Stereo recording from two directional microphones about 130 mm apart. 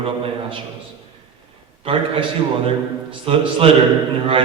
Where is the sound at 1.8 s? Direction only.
45° right (ahead or behind).